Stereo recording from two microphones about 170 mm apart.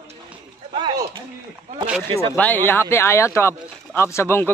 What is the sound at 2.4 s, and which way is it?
Speech, 10° left (ahead or behind).